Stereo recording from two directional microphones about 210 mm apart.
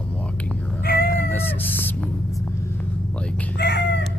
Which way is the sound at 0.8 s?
45° left (ahead or behind).